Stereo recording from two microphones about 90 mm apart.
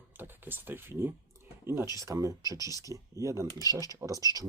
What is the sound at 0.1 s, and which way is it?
Speech, 20° right (ahead or behind).